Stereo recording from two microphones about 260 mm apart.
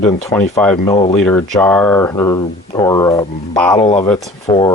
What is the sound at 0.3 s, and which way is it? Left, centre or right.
Speech, centre.